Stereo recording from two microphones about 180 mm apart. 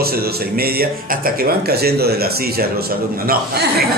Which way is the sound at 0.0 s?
60° right (ahead or behind).